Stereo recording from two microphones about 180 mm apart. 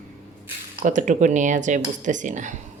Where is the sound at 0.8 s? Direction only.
45° right (ahead or behind).